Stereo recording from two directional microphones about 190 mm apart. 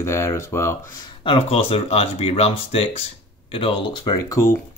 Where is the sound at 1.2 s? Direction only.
30° left (ahead or behind).